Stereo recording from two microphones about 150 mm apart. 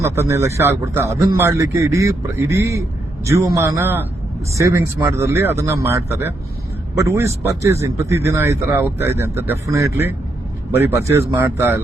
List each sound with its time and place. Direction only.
0.0 s a man's voice: 20° right (ahead or behind)